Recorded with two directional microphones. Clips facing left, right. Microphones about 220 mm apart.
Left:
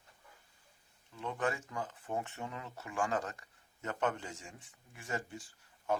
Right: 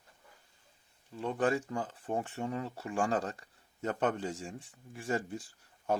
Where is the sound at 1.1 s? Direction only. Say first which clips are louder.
Right 6 dB; 35° right (ahead or behind).